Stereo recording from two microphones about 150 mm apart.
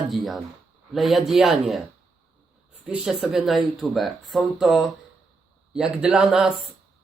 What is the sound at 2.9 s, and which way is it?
Mantra, 5° right (ahead or behind).